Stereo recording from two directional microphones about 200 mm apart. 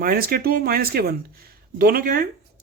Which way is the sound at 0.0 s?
50° right (ahead or behind).